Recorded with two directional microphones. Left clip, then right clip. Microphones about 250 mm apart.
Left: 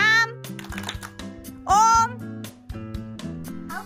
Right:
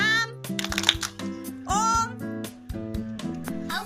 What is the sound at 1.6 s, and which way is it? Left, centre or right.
Music, centre.